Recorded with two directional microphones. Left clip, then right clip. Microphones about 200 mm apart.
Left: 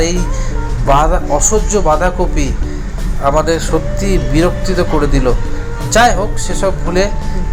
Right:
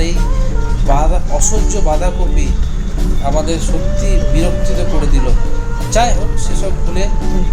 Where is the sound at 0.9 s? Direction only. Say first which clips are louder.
Left 7 dB; 15° left (ahead or behind).